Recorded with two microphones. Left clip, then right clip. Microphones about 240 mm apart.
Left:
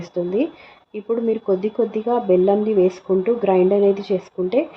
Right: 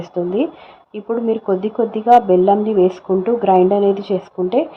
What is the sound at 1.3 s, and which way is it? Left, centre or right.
A woman's voice, centre.